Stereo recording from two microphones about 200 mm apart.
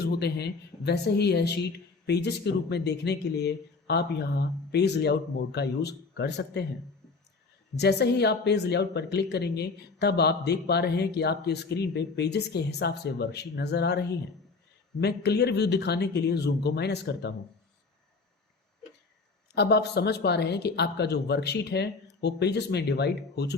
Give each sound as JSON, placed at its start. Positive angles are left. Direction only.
{"t": 0.0, "sound": "speech", "side_deg": 55}
{"t": 7.8, "sound": "speech", "side_deg": 55}
{"t": 19.5, "sound": "speech", "side_deg": 55}